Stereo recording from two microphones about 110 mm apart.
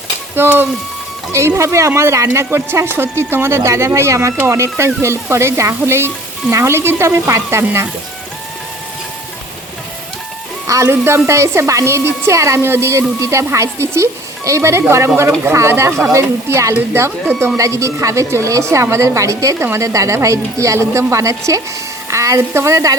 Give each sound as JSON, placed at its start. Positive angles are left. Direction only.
{"t": 0.3, "sound": "a woman's voice", "side_deg": -20}
{"t": 10.7, "sound": "a woman's voice", "side_deg": -25}